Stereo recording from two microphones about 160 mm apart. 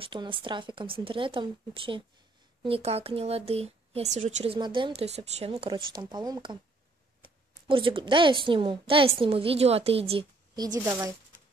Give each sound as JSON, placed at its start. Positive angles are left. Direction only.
{"t": 0.0, "sound": "a woman's voice", "side_deg": -30}
{"t": 4.6, "sound": "a woman's voice", "side_deg": -30}
{"t": 7.6, "sound": "a woman's voice", "side_deg": -30}
{"t": 10.5, "sound": "speech", "side_deg": -25}